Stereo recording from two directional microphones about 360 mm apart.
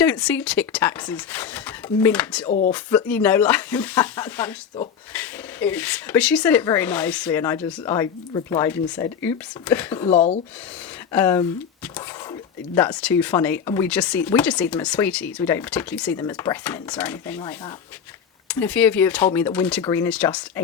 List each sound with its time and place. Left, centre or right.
0.0 s speech: centre
2.5 s speech: centre
2.7 s speech: centre
10.1 s speech: centre
11.1 s speech: centre